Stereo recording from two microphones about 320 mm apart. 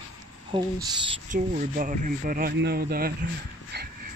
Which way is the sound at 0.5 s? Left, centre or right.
Centre.